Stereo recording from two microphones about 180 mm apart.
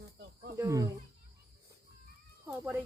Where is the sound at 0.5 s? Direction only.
15° right (ahead or behind).